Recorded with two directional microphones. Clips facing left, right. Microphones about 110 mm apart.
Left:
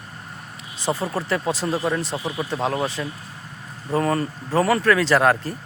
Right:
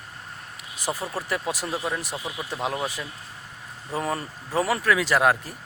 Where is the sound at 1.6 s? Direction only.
Centre (ahead or behind).